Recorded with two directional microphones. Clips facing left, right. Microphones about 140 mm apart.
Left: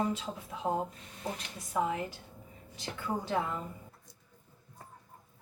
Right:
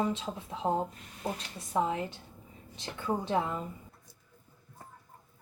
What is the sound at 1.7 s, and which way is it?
Speech, 25° right (ahead or behind).